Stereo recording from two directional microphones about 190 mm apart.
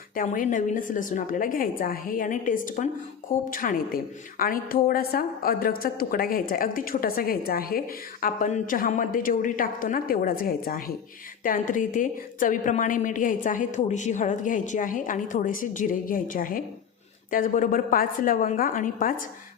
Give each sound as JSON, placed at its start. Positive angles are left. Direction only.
{"t": 0.2, "sound": "a woman's voice", "side_deg": 45}